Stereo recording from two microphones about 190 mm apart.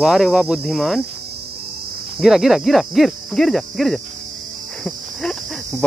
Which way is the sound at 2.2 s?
Centre (ahead or behind).